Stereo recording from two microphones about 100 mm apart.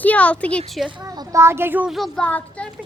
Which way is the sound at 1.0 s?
35° right (ahead or behind).